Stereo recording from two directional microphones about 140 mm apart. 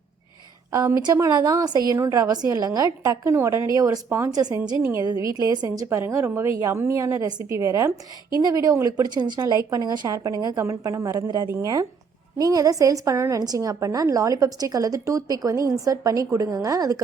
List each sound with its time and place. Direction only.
0.7 s a woman's voice: 25° right (ahead or behind)
4.8 s a woman's voice: 15° right (ahead or behind)